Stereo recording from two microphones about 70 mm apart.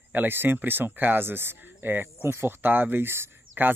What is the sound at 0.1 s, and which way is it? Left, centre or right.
Speech, right.